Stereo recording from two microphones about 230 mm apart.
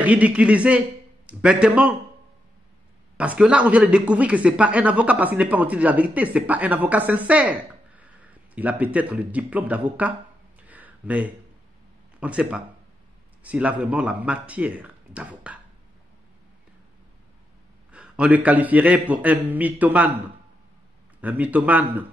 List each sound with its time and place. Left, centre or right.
0.0 s a man's voice: centre
3.2 s a man's voice: centre
10.7 s a sound: centre
12.2 s speech: centre
17.9 s a man's voice: centre
21.2 s a man's voice: centre